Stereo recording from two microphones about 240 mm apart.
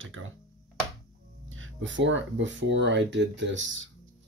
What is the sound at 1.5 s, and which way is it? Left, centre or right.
Speech, right.